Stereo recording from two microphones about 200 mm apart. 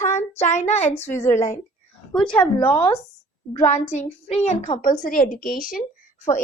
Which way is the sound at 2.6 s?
25° left (ahead or behind).